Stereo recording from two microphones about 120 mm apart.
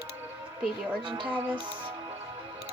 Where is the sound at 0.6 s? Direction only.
10° right (ahead or behind).